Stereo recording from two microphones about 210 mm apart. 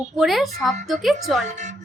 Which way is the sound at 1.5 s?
35° right (ahead or behind).